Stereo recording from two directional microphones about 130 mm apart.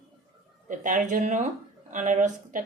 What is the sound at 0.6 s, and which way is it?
Speech, 85° right.